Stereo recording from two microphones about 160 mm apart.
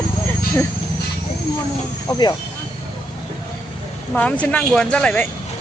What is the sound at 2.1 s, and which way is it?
Speech, 25° left (ahead or behind).